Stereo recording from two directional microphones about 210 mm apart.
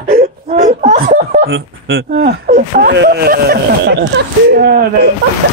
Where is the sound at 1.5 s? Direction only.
55° right (ahead or behind).